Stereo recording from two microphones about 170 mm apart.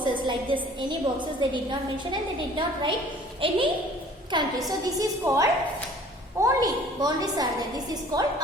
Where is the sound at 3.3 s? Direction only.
30° right (ahead or behind).